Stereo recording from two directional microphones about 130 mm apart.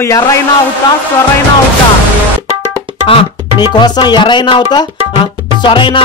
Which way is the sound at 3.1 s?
40° left (ahead or behind).